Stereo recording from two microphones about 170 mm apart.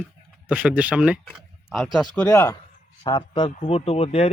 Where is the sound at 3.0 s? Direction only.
25° left (ahead or behind).